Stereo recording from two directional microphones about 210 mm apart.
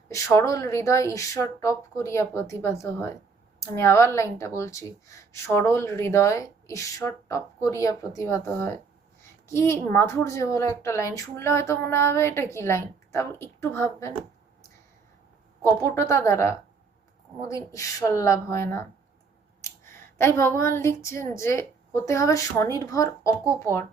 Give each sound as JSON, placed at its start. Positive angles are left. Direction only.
{"t": 0.1, "sound": "a woman's voice", "side_deg": 15}
{"t": 15.6, "sound": "a woman's voice", "side_deg": 10}
{"t": 19.6, "sound": "a sound", "side_deg": 15}
{"t": 20.1, "sound": "a woman's voice", "side_deg": 10}